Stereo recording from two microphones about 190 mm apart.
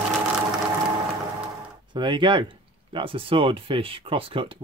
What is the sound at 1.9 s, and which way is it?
Speech, 25° right (ahead or behind).